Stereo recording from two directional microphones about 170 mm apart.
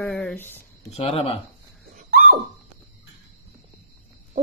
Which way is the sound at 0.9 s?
35° left (ahead or behind).